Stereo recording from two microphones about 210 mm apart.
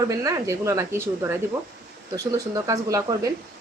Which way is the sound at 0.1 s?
15° right (ahead or behind).